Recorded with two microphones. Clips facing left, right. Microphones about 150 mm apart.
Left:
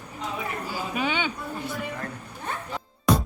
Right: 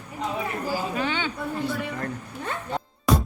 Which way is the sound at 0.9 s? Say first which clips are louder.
Even; 15° left (ahead or behind).